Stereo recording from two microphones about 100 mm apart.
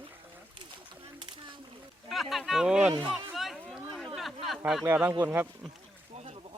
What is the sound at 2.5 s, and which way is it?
Speech, 5° right (ahead or behind).